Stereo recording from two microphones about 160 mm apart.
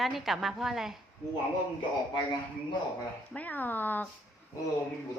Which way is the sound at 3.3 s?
10° left (ahead or behind).